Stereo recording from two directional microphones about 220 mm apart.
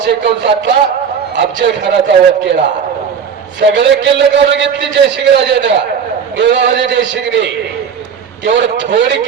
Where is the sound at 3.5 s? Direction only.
55° right (ahead or behind).